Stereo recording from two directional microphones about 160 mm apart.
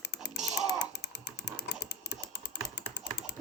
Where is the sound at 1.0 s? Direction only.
90° left.